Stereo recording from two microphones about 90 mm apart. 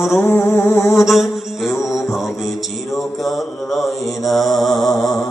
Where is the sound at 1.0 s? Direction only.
Centre (ahead or behind).